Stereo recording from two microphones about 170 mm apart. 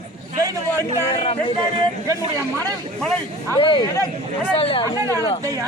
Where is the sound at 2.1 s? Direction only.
20° right (ahead or behind).